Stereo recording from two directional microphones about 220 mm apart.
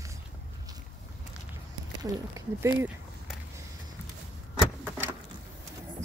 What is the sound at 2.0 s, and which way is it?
Speech, 15° right (ahead or behind).